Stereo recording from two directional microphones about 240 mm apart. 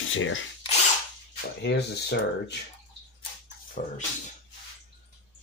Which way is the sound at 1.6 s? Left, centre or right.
Left.